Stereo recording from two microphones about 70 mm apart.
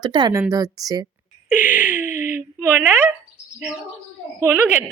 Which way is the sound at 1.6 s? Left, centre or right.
Right.